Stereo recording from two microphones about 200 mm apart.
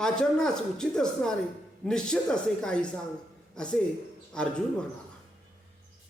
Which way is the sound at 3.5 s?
5° left (ahead or behind).